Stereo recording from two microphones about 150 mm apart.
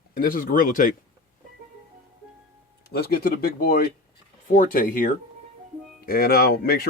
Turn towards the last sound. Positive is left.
turn(degrees=85)